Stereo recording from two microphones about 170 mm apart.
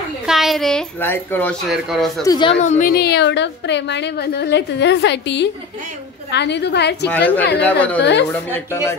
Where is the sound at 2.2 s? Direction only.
25° left (ahead or behind).